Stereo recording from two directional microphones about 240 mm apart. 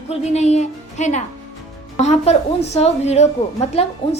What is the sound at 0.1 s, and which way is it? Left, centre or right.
A woman's voice, left.